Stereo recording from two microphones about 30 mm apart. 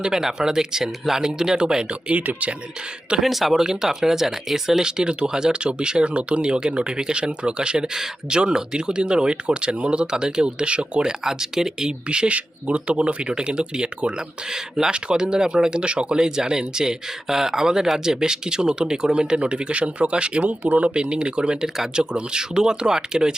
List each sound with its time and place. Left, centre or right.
0.0 s speech: centre
1.9 s speech: right
3.2 s speech: centre
3.5 s speech: centre
4.8 s speech: right
11.2 s speech: centre
12.0 s speech: right
12.3 s speech: right
13.3 s speech: right
15.8 s speech: right
20.9 s speech: right